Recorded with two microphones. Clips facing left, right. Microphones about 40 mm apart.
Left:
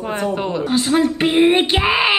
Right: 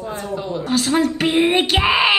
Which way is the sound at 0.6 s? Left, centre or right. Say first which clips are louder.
Left 1 dB; centre.